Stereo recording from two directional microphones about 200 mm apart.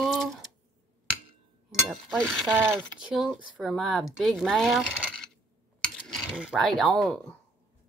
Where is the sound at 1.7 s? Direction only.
Centre (ahead or behind).